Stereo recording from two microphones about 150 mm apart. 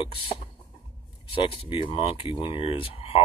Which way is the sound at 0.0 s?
35° left (ahead or behind).